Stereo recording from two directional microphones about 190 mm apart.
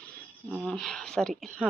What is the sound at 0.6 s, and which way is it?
Speech, 5° left (ahead or behind).